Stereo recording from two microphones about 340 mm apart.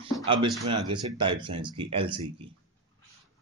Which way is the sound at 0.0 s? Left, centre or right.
Centre.